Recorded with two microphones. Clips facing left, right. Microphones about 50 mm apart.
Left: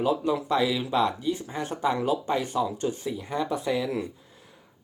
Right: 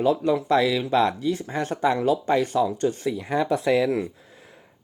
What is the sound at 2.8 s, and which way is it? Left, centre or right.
Speech, right.